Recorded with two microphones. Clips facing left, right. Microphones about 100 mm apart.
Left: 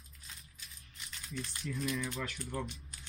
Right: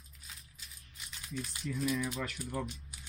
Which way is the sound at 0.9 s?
5° right (ahead or behind).